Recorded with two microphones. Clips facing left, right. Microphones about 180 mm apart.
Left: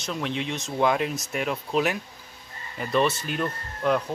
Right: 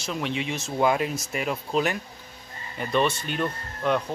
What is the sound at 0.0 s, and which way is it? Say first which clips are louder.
Speech: even; centre (ahead or behind).